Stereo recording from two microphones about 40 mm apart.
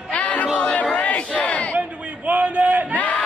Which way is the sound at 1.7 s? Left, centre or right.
Right.